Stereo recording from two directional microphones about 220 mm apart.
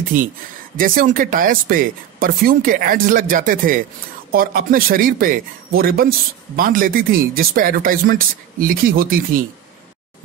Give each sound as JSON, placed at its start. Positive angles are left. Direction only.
{"t": 0.7, "sound": "speech", "side_deg": -40}